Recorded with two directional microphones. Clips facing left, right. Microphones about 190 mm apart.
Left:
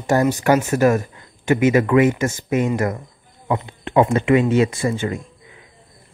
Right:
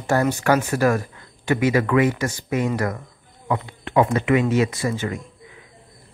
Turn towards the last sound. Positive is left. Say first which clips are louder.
# left 3 dB
turn(degrees=30)  # may be behind; listen again after turning